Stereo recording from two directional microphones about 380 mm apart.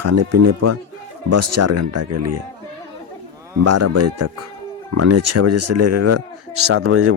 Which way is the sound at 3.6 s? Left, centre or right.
Right.